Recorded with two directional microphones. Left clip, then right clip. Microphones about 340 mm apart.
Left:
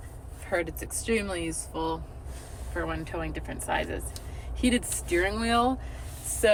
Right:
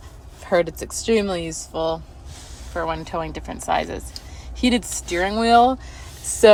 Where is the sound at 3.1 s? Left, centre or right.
Centre.